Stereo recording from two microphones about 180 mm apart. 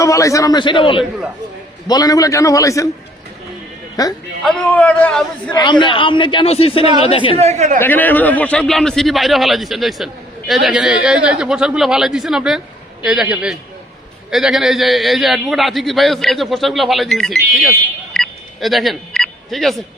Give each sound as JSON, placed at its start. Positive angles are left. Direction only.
{"t": 0.0, "sound": "a man's voice", "side_deg": 15}
{"t": 4.0, "sound": "a man's voice", "side_deg": 20}
{"t": 4.4, "sound": "a man's voice", "side_deg": 5}
{"t": 5.5, "sound": "a man's voice", "side_deg": 25}
{"t": 7.3, "sound": "speech", "side_deg": -40}
{"t": 7.8, "sound": "a man's voice", "side_deg": 10}
{"t": 18.1, "sound": "telephone dialing", "side_deg": 0}